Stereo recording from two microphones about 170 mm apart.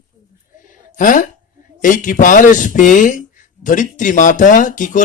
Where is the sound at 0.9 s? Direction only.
50° left (ahead or behind).